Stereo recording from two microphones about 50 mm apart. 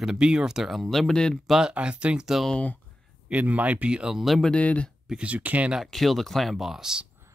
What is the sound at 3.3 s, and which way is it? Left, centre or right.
Speech, right.